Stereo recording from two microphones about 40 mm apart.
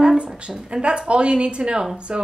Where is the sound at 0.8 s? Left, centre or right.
Right.